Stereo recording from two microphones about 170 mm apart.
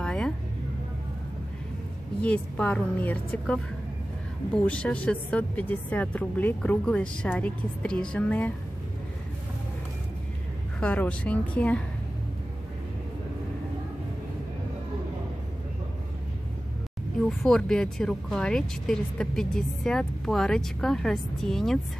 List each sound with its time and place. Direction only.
0.0 s a sound: 5° left (ahead or behind)
2.2 s a woman's voice: 10° left (ahead or behind)
10.8 s a woman's voice: 10° left (ahead or behind)
17.3 s speech: centre (ahead or behind)